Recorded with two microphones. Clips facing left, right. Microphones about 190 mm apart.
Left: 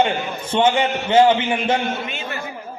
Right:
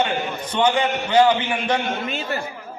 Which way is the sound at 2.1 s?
35° right (ahead or behind).